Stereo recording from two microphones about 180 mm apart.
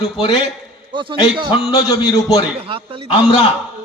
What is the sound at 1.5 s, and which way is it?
Speech, 20° left (ahead or behind).